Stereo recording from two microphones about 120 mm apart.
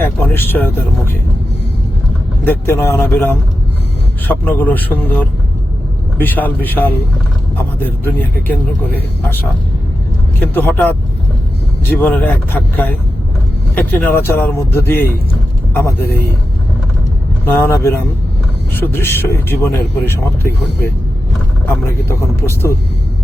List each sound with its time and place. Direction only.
0.0 s speech: 15° left (ahead or behind)
2.4 s speech: 15° left (ahead or behind)
6.1 s speech: 15° left (ahead or behind)
10.4 s speech: 15° left (ahead or behind)
17.4 s speech: 20° left (ahead or behind)
21.7 s speech: 20° left (ahead or behind)